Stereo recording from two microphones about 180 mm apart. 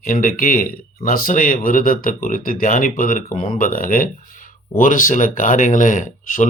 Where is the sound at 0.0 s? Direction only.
50° left (ahead or behind).